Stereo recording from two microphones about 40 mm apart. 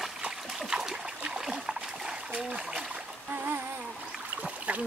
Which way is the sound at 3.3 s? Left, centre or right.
Right.